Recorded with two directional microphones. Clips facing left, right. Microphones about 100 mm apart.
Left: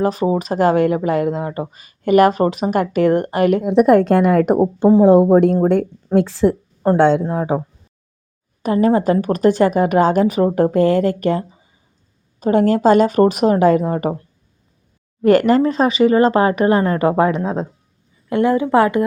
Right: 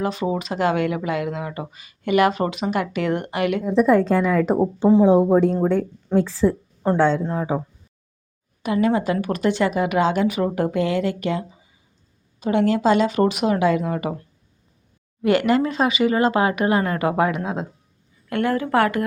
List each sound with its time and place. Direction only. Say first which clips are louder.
0.0 s speech: left 6 dB; 40° left (ahead or behind)
3.6 s a woman's voice: left 3 dB; 70° left (ahead or behind)
7.3 s speech: left 4 dB; 55° left (ahead or behind)
8.6 s speech: left 5 dB; 40° left (ahead or behind)
15.2 s speech: left 6 dB; 40° left (ahead or behind)
18.3 s speech: left 6 dB; 20° left (ahead or behind)